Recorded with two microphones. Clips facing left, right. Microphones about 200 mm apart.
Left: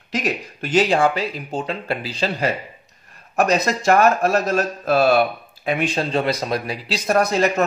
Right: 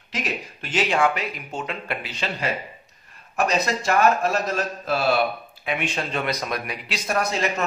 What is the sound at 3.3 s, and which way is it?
Speech, 45° left (ahead or behind).